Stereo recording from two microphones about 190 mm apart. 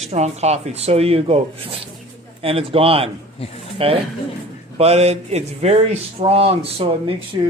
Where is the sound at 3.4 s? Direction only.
30° left (ahead or behind).